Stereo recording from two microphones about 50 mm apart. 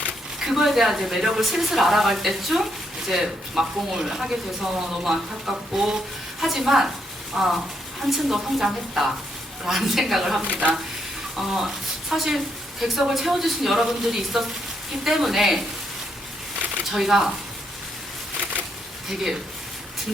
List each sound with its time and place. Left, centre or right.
0.4 s speech: centre
10.4 s speech: right
11.3 s speech: centre
16.9 s speech: centre